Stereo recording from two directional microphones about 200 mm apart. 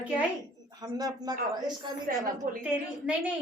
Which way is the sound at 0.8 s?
20° right (ahead or behind).